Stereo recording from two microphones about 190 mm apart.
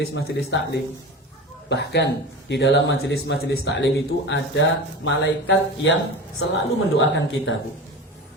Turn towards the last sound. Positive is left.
turn(degrees=75)  # may be behind; listen again after turning